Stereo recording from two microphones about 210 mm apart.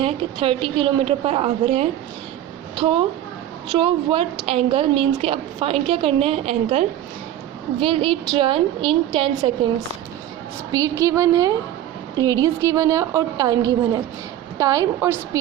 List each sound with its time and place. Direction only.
0.0 s a woman's voice: 25° right (ahead or behind)
10.7 s a woman's voice: 15° right (ahead or behind)